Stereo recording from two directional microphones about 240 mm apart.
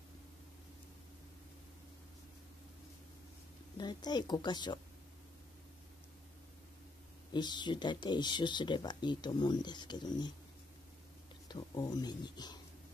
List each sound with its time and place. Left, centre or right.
3.7 s speech: centre
7.3 s speech: centre
11.4 s speech: centre